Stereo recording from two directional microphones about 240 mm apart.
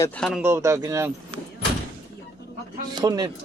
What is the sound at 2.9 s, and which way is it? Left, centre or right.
Speech, centre.